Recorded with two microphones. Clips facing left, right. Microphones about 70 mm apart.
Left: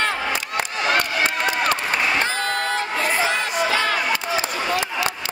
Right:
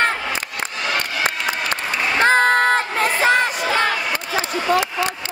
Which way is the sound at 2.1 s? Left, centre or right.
Right.